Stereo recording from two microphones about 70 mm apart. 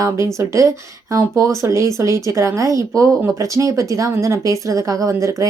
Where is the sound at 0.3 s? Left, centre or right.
Right.